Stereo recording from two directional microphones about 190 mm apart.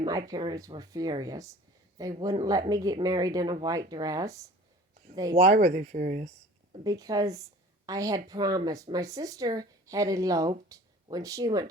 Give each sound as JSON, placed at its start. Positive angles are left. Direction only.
{"t": 0.0, "sound": "speech", "side_deg": -20}
{"t": 5.4, "sound": "speech", "side_deg": -40}
{"t": 6.8, "sound": "speech", "side_deg": -20}